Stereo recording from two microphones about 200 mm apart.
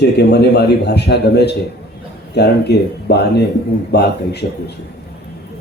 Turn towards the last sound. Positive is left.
turn(degrees=55)  # may be behind; listen again after turning